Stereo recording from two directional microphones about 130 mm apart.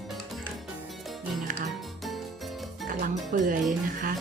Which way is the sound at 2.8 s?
90° right.